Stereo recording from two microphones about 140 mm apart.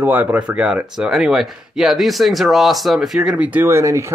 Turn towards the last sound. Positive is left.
turn(degrees=-20)  # may be behind; listen again after turning